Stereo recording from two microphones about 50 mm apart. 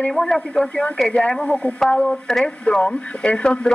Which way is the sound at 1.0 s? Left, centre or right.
Left.